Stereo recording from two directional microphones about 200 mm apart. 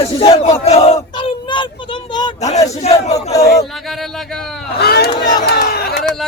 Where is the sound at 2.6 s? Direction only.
35° left (ahead or behind).